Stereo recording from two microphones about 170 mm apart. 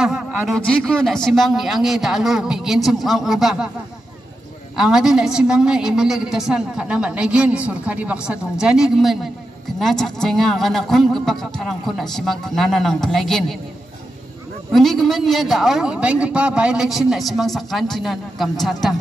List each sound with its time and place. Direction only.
0.0 s a sound: 5° right (ahead or behind)
0.6 s a woman's voice: 5° left (ahead or behind)
4.7 s a woman's voice: 5° right (ahead or behind)
14.7 s a woman's voice: centre (ahead or behind)